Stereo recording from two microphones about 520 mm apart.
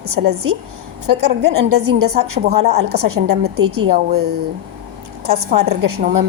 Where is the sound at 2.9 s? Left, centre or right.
Right.